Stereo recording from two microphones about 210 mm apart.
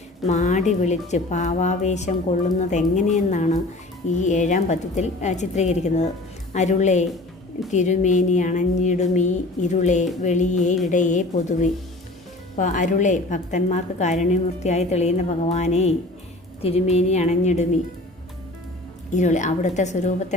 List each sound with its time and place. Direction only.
0.3 s a woman's voice: 35° left (ahead or behind)
19.1 s a woman's voice: 35° left (ahead or behind)